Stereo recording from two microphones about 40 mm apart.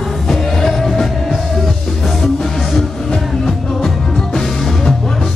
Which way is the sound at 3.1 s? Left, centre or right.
Centre.